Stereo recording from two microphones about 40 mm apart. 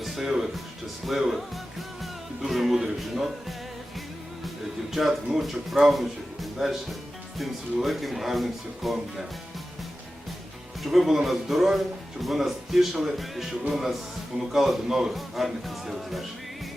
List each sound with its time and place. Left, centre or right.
0.0 s music: centre
1.0 s a man's voice: centre
2.0 s music: centre
3.0 s speech: centre
4.4 s speech: centre
10.8 s a man's voice: centre
15.1 s speech: centre